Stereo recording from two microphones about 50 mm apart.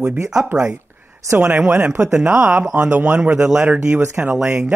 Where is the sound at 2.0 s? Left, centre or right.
Centre.